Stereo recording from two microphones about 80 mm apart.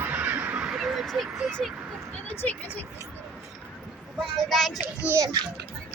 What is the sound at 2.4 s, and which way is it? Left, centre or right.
Speech, left.